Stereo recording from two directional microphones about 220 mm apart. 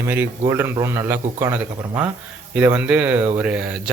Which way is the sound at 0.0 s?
10° right (ahead or behind).